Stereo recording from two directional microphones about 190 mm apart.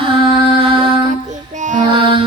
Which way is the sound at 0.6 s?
30° right (ahead or behind).